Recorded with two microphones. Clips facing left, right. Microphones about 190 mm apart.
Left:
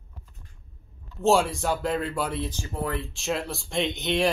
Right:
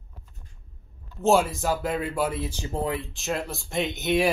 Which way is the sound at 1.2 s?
Centre (ahead or behind).